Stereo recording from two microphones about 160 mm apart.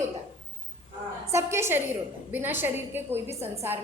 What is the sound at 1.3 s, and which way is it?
A woman's voice, 15° right (ahead or behind).